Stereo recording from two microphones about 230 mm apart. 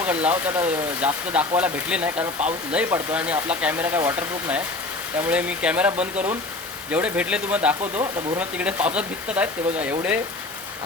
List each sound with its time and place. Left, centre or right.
0.0 s speech: centre
7.8 s speech: right
8.4 s speech: centre